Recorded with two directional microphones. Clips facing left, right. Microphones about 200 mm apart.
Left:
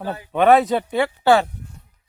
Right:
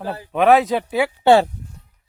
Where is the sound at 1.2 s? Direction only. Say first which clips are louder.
Right 3 dB; 25° right (ahead or behind).